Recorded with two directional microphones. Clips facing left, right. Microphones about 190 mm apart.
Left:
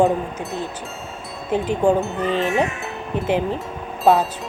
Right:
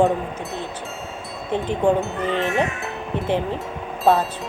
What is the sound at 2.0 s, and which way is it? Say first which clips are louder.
Speech: left 2 dB; centre (ahead or behind).